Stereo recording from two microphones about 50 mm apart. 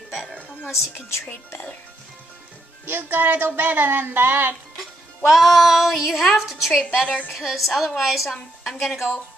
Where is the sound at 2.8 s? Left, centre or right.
Right.